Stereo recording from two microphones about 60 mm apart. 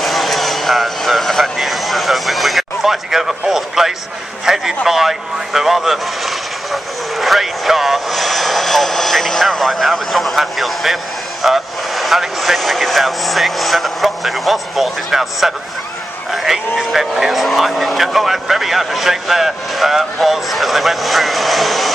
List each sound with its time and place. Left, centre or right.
0.0 s vehicle: centre
4.5 s speech: centre